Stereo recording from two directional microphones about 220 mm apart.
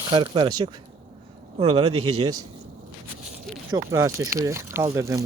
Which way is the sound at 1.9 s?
90° right.